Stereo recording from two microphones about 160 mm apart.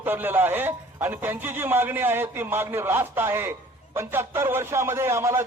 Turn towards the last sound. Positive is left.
turn(degrees=-15)  # may be behind; listen again after turning